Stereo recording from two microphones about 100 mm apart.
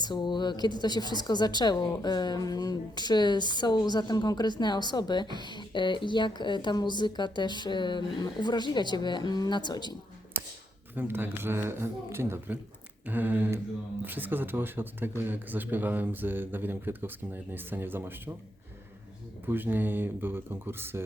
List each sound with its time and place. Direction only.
0.0 s a woman's voice: 50° left (ahead or behind)
10.3 s a sound: 20° right (ahead or behind)
10.9 s speech: 20° right (ahead or behind)
19.5 s speech: 20° right (ahead or behind)